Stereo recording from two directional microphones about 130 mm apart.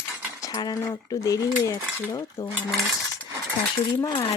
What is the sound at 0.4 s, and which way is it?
Speech, 30° left (ahead or behind).